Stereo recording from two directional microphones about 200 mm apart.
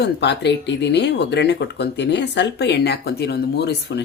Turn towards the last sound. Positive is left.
turn(degrees=55)  # may be behind; listen again after turning